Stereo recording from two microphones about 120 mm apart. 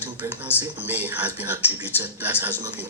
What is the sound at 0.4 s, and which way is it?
A man's voice, 15° right (ahead or behind).